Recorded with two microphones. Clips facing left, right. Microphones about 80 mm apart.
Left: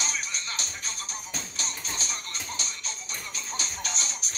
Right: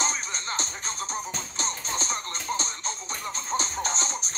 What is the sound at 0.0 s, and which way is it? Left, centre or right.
Music, right.